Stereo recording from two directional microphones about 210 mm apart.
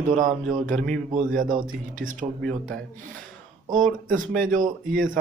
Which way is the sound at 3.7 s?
40° right (ahead or behind).